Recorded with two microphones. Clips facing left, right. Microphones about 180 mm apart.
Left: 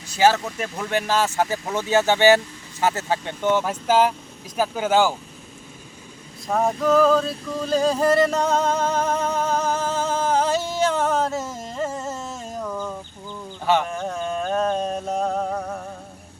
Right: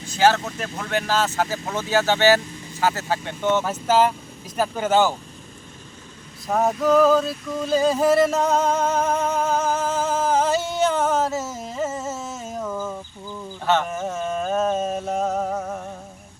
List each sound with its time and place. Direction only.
0.2 s speech: 10° left (ahead or behind)
6.5 s a sound: centre (ahead or behind)
13.8 s music: 5° right (ahead or behind)